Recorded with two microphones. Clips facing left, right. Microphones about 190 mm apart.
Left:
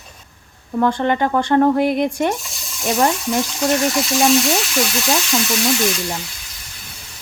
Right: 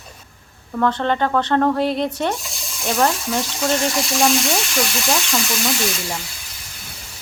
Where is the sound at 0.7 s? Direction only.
15° left (ahead or behind).